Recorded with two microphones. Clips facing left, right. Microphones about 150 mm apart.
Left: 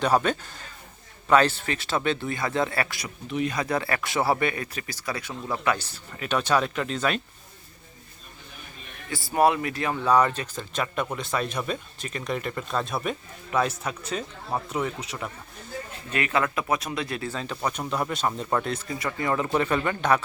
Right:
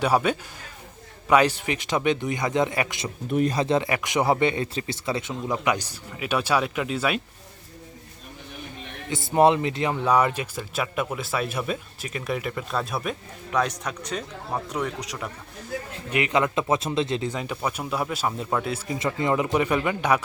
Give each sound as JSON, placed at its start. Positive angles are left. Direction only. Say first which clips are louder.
{"t": 0.0, "sound": "speech", "louder": "right 1 dB", "side_deg": -10}
{"t": 3.2, "sound": "speech", "louder": "right 5 dB", "side_deg": -45}
{"t": 3.5, "sound": "speech", "louder": "right 4 dB", "side_deg": -25}
{"t": 9.0, "sound": "a man's voice", "louder": "right 3 dB", "side_deg": -20}
{"t": 16.1, "sound": "speech", "louder": "right 3 dB", "side_deg": -15}
{"t": 18.9, "sound": "speech", "louder": "right 3 dB", "side_deg": -20}